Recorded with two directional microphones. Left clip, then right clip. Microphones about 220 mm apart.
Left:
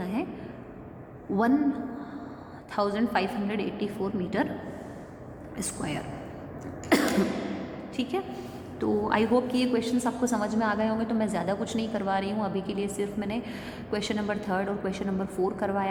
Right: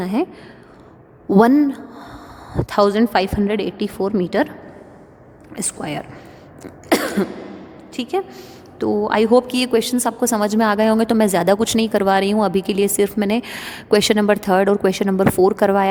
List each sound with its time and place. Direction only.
0.0 s a woman's voice: 50° right (ahead or behind)
1.3 s a woman's voice: 50° right (ahead or behind)
5.5 s a woman's voice: 45° right (ahead or behind)
6.8 s cough: 50° right (ahead or behind)
7.9 s a woman's voice: 45° right (ahead or behind)